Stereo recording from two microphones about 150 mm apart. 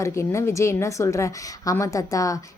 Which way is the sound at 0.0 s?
20° left (ahead or behind).